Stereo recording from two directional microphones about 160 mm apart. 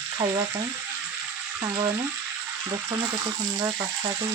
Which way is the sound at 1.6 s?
30° right (ahead or behind).